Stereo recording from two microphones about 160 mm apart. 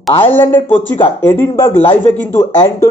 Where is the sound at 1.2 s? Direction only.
15° left (ahead or behind).